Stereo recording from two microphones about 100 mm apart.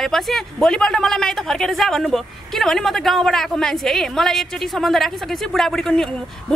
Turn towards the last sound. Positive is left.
turn(degrees=5)  # may be behind; listen again after turning